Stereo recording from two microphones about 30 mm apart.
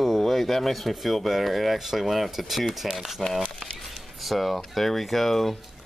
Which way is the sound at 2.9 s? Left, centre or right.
Centre.